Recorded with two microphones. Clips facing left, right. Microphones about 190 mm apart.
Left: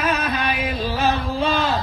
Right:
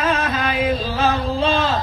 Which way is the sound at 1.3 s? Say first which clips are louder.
Right 2 dB; 25° right (ahead or behind).